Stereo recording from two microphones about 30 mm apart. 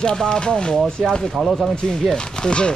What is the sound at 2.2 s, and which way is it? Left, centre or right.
Speech, left.